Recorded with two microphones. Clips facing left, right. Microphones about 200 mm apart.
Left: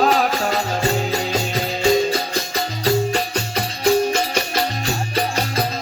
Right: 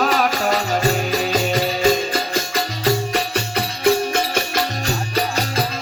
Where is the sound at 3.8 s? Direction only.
55° right (ahead or behind).